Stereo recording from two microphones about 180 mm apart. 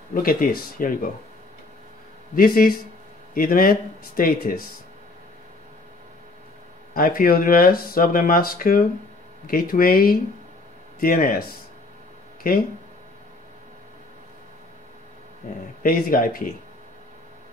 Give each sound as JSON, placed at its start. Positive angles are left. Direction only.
{"t": 0.1, "sound": "speech", "side_deg": 50}
{"t": 2.3, "sound": "speech", "side_deg": 55}
{"t": 6.9, "sound": "speech", "side_deg": 55}
{"t": 15.8, "sound": "speech", "side_deg": 55}